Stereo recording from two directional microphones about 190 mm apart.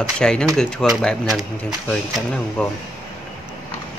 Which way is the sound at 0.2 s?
5° left (ahead or behind).